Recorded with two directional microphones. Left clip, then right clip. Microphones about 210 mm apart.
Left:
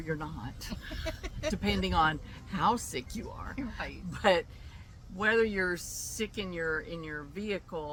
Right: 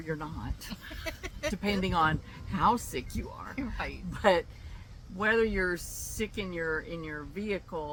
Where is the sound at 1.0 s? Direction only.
25° right (ahead or behind).